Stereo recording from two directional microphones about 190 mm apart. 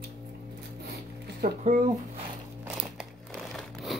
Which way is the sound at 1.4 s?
50° right (ahead or behind).